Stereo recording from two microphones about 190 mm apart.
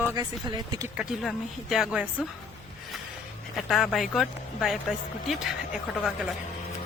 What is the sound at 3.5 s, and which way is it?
Speech, centre (ahead or behind).